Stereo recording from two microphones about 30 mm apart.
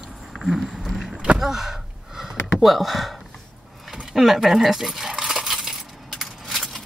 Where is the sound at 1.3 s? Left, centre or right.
Centre.